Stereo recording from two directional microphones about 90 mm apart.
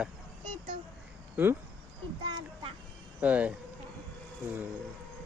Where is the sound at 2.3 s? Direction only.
90° right.